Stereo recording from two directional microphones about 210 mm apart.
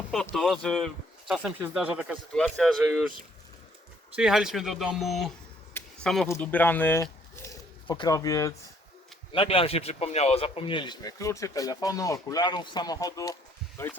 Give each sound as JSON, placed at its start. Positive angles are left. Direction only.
{"t": 0.3, "sound": "speech", "side_deg": 0}
{"t": 4.1, "sound": "speech", "side_deg": -5}
{"t": 5.7, "sound": "a sound", "side_deg": 5}
{"t": 6.2, "sound": "speech", "side_deg": 10}